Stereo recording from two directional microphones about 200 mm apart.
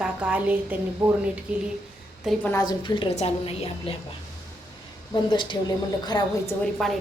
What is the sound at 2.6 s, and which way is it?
A woman's voice, 20° left (ahead or behind).